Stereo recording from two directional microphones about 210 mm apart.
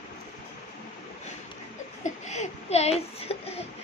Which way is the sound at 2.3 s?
30° left (ahead or behind).